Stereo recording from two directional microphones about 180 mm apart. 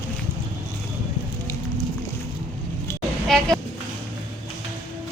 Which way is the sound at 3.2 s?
Centre (ahead or behind).